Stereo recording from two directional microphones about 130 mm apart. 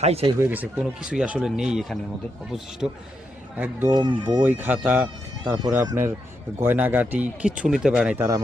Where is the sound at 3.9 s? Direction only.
35° right (ahead or behind).